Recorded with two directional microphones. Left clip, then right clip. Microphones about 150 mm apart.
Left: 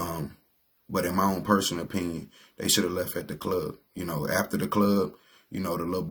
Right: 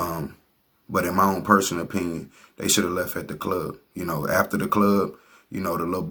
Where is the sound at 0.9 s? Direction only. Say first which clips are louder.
Right 5 dB; 20° left (ahead or behind).